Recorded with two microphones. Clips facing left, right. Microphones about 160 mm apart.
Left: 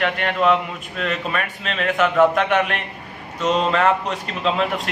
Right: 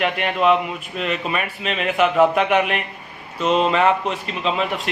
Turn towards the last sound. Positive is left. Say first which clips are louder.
# left 1 dB
turn(degrees=0)  # may be behind; listen again after turning